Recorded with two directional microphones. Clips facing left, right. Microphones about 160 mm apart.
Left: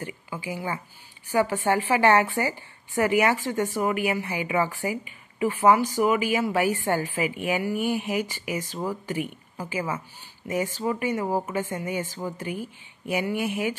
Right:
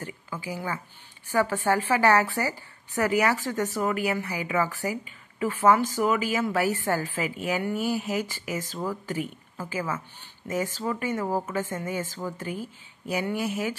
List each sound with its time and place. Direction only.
0.5 s a woman's voice: 20° left (ahead or behind)